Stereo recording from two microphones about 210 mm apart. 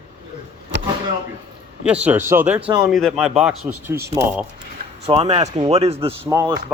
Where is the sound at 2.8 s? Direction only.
Centre (ahead or behind).